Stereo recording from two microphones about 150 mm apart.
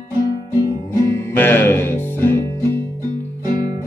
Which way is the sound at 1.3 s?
15° left (ahead or behind).